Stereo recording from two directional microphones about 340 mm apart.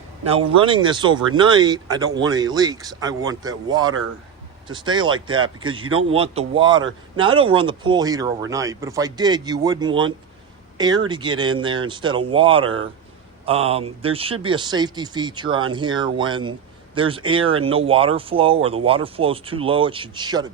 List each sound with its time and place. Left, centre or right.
0.3 s speech: centre